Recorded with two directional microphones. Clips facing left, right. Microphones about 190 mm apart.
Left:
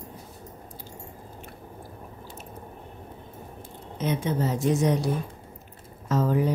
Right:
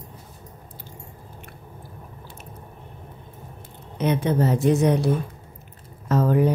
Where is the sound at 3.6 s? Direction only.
65° right (ahead or behind).